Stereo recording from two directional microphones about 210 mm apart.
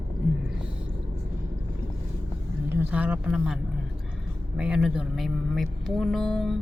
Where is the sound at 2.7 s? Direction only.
10° right (ahead or behind).